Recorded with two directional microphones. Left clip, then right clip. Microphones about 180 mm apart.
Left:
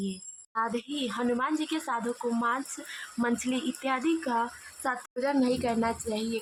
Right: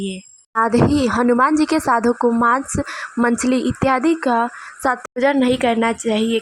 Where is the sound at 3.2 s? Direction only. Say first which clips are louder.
Right 12 dB; 35° right (ahead or behind).